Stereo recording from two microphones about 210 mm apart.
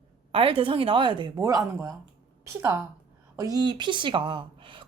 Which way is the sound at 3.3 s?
15° right (ahead or behind).